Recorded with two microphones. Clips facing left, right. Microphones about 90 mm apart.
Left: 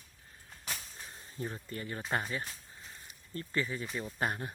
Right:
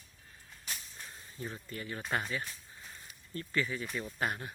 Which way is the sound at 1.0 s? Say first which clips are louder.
Left 3 dB; 35° left (ahead or behind).